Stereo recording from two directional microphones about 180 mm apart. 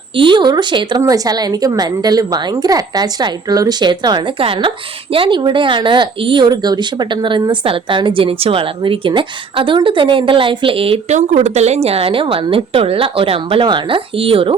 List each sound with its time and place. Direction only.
0.2 s speech: 25° right (ahead or behind)